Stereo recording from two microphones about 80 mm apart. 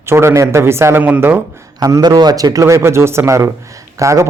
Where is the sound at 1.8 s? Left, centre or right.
Right.